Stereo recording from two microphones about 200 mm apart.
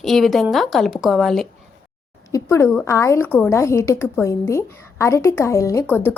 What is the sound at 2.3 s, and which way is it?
A woman's voice, 15° left (ahead or behind).